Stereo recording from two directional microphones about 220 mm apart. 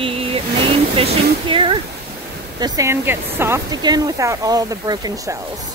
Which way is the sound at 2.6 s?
15° right (ahead or behind).